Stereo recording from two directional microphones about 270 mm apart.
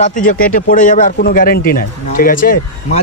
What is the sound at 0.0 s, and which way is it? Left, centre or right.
Speech, left.